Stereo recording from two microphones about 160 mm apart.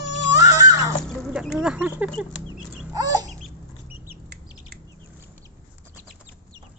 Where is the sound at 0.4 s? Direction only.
20° right (ahead or behind).